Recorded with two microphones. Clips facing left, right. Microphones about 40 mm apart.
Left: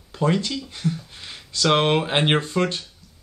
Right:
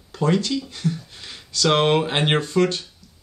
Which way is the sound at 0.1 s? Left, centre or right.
Centre.